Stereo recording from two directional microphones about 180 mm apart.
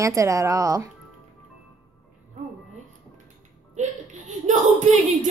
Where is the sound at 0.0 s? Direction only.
15° right (ahead or behind).